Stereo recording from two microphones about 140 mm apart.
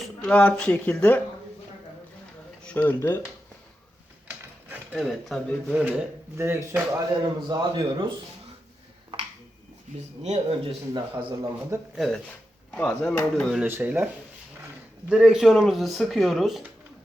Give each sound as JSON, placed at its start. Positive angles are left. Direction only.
{"t": 0.0, "sound": "speech", "side_deg": 5}
{"t": 2.6, "sound": "speech", "side_deg": 10}
{"t": 4.7, "sound": "a sound", "side_deg": -10}
{"t": 5.0, "sound": "speech", "side_deg": 0}
{"t": 5.7, "sound": "speech", "side_deg": -10}
{"t": 7.2, "sound": "a man's voice", "side_deg": -30}
{"t": 10.2, "sound": "speech", "side_deg": -50}
{"t": 10.9, "sound": "a man's voice", "side_deg": -35}
{"t": 11.9, "sound": "speech", "side_deg": 5}
{"t": 13.7, "sound": "speech", "side_deg": -15}
{"t": 15.1, "sound": "speech", "side_deg": -5}